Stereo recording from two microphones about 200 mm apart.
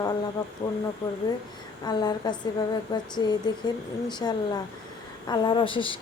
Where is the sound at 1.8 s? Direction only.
20° left (ahead or behind).